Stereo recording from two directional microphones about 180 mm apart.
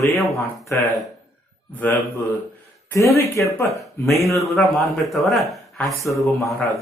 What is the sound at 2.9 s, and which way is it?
Speech, 15° left (ahead or behind).